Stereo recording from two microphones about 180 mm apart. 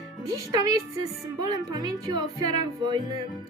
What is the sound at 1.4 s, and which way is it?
Speech, 20° right (ahead or behind).